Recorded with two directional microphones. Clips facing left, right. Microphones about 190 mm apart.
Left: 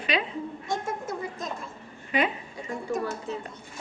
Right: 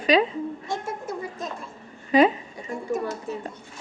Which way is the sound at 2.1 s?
35° right (ahead or behind).